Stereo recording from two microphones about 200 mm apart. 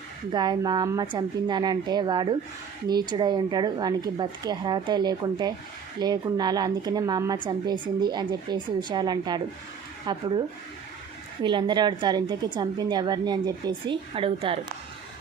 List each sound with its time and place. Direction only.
0.3 s a woman's voice: 20° right (ahead or behind)
11.4 s a woman's voice: 25° right (ahead or behind)